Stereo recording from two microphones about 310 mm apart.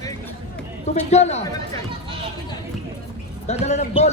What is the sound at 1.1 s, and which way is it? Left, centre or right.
Speech, left.